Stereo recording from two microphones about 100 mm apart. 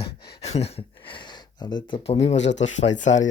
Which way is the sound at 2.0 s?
85° left.